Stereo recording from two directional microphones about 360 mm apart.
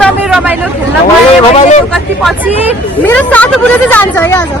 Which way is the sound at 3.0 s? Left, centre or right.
Centre.